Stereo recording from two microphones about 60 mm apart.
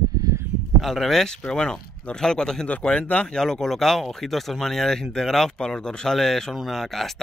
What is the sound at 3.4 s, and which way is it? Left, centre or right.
Speech, centre.